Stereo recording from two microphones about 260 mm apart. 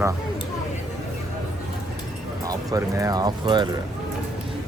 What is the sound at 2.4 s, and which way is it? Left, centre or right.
Speech, centre.